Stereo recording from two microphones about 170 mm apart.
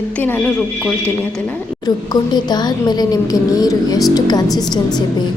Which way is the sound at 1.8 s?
25° left (ahead or behind).